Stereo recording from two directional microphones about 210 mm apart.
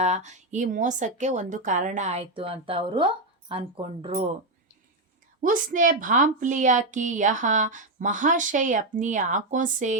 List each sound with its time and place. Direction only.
0.0 s a woman's voice: 35° right (ahead or behind)
5.4 s a woman's voice: 40° right (ahead or behind)